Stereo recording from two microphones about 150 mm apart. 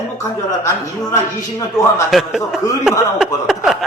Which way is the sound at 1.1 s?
20° left (ahead or behind).